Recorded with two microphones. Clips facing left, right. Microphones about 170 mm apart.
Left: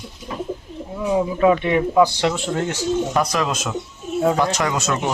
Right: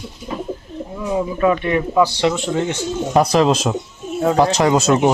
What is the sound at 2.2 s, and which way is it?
Speech, centre (ahead or behind).